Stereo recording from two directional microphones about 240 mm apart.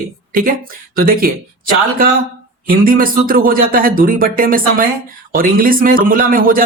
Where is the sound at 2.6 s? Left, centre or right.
Right.